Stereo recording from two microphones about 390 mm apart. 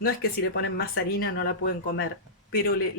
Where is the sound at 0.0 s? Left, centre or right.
Left.